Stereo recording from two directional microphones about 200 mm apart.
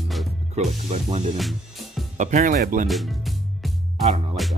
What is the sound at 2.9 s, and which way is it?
Music, centre (ahead or behind).